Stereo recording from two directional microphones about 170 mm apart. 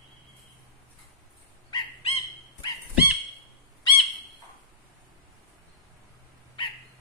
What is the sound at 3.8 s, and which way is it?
Bird, 30° left (ahead or behind).